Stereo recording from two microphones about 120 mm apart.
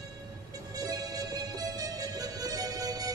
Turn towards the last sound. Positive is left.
turn(degrees=-30)  # may be behind; listen again after turning